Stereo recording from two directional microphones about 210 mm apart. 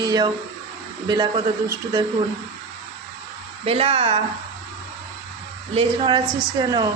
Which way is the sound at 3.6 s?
25° right (ahead or behind).